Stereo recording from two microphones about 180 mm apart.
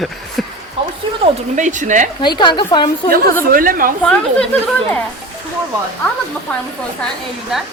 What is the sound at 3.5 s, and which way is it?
Speech, 50° right (ahead or behind).